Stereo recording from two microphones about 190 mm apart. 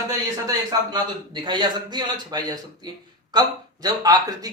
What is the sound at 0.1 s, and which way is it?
A man's voice, 15° right (ahead or behind).